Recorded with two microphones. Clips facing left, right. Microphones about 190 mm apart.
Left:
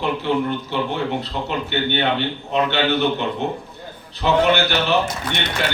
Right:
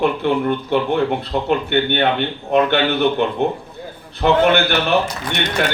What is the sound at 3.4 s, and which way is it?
Speech, 55° right (ahead or behind).